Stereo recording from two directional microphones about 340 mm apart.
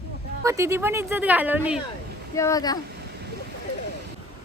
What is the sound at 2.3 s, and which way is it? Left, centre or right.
Speech, centre.